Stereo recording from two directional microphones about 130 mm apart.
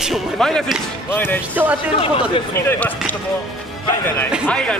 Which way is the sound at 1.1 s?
15° left (ahead or behind).